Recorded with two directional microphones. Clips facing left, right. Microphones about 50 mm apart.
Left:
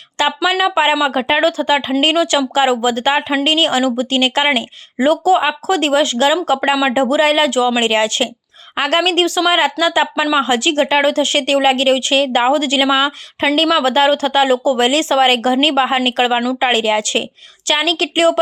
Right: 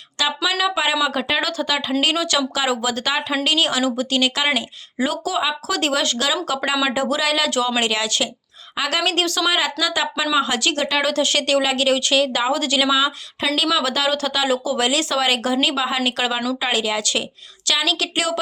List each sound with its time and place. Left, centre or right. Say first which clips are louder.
0.2 s a sound: left 6 dB; left
0.5 s a woman's voice: left 6 dB; left
7.5 s speech: left 5 dB; left
7.9 s a woman's voice: left 6 dB; left
9.5 s a woman's voice: left 6 dB; left